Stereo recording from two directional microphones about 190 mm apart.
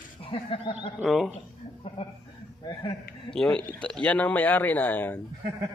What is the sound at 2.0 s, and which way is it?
Speech, 30° left (ahead or behind).